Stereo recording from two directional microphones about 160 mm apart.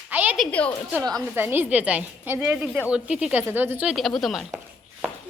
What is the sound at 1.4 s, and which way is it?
Speech, 10° right (ahead or behind).